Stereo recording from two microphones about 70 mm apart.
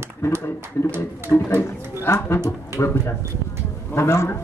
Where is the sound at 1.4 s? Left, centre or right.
Left.